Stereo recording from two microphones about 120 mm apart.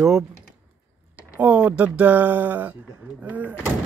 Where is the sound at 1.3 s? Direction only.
10° right (ahead or behind).